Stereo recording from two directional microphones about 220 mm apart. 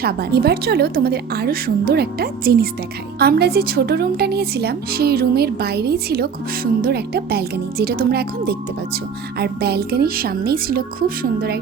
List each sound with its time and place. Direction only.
0.0 s a woman's voice: 45° right (ahead or behind)